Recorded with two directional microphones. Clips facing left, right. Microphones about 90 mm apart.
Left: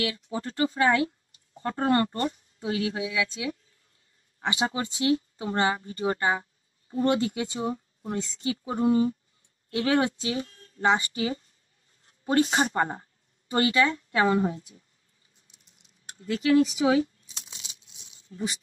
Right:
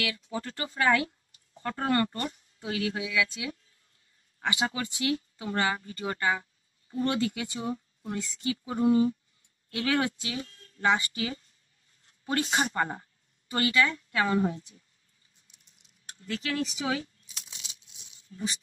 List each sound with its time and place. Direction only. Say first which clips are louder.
0.0 s a woman's voice: left 3 dB; 25° left (ahead or behind)
16.2 s a woman's voice: left 10 dB; 25° left (ahead or behind)
17.0 s a sound: left 13 dB; 30° left (ahead or behind)
18.3 s speech: left 4 dB; 30° left (ahead or behind)